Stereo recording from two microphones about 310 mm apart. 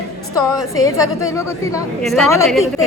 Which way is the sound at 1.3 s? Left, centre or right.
Centre.